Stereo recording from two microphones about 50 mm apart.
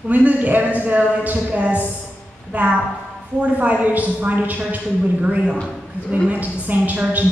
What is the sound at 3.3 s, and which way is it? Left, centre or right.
A woman's voice, right.